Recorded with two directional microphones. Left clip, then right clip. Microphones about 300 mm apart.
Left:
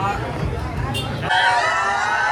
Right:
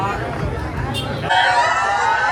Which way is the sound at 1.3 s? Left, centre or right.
Centre.